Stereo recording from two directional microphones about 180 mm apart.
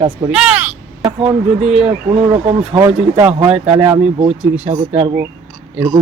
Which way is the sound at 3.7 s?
20° right (ahead or behind).